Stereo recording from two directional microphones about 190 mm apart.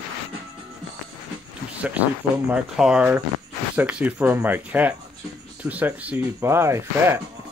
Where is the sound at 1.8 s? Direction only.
10° right (ahead or behind).